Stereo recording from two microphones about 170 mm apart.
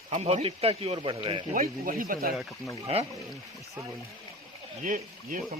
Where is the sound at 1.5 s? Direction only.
55° right (ahead or behind).